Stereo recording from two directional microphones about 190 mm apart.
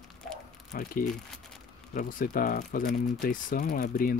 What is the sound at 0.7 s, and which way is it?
Speech, 50° left (ahead or behind).